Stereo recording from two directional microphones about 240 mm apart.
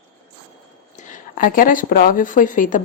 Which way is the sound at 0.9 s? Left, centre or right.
Left.